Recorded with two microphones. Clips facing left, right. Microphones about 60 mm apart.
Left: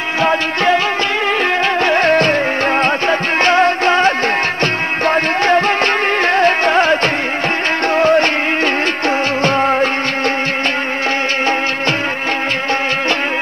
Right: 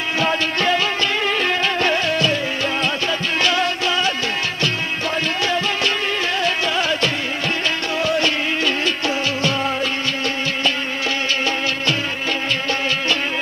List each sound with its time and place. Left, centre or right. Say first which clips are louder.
0.2 s music: left 6 dB; left
1.8 s music: left 6 dB; left